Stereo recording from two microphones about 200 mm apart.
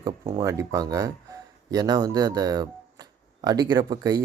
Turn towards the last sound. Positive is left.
turn(degrees=-20)  # may be behind; listen again after turning